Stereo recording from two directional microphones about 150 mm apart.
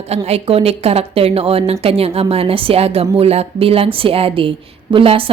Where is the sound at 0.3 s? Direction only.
40° right (ahead or behind).